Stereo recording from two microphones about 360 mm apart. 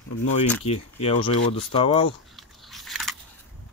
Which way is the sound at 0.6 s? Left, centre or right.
Centre.